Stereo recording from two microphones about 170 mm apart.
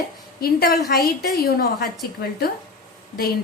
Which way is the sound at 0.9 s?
65° left (ahead or behind).